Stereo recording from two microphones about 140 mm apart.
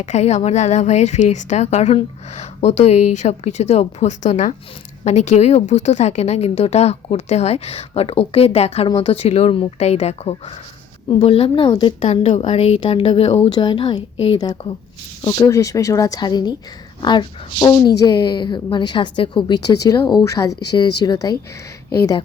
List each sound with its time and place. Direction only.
0.0 s a woman's voice: 55° left (ahead or behind); by 22.2 s 25° left (ahead or behind)